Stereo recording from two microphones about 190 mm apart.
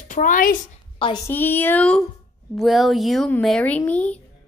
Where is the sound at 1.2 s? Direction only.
10° left (ahead or behind).